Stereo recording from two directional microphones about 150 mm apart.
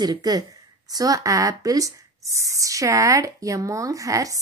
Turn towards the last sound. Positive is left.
turn(degrees=-20)  # may be behind; listen again after turning